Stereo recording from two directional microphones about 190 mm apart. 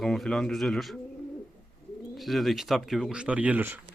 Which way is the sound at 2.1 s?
Centre (ahead or behind).